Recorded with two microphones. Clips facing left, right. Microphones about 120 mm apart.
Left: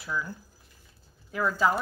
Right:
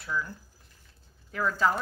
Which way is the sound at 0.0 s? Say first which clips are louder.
Even; 10° left (ahead or behind).